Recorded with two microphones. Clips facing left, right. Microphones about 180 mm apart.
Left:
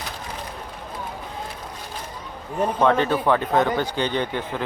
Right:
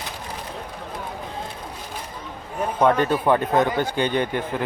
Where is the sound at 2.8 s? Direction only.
15° right (ahead or behind).